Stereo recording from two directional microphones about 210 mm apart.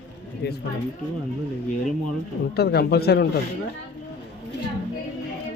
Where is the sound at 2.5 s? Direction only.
50° left (ahead or behind).